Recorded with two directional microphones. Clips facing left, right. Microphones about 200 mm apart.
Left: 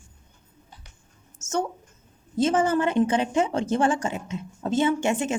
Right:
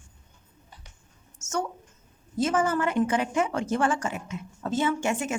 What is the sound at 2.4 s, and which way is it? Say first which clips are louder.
A woman's voice: left 3 dB; 25° left (ahead or behind).